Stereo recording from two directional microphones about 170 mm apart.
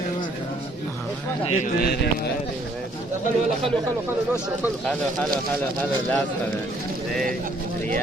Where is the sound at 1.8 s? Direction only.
70° left (ahead or behind).